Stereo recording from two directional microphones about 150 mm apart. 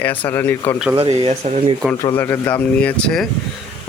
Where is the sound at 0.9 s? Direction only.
45° right (ahead or behind).